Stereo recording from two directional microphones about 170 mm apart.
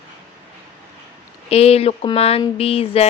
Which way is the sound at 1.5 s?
35° left (ahead or behind).